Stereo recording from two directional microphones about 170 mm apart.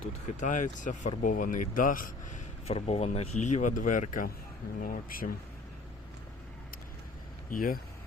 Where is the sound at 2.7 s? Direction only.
35° left (ahead or behind); by 5.3 s 55° left (ahead or behind).